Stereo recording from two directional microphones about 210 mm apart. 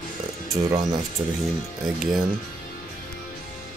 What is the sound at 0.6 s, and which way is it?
Speech, 20° right (ahead or behind).